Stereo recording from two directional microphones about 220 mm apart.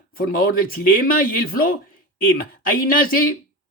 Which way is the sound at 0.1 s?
40° left (ahead or behind).